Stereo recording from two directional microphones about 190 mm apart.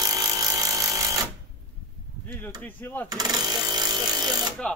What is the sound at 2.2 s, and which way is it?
Chop, 10° left (ahead or behind).